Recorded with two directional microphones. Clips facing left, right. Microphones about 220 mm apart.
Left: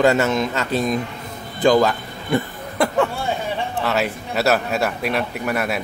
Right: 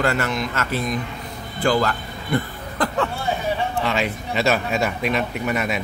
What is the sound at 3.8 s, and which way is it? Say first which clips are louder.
Speech: left 1 dB; 5° left (ahead or behind).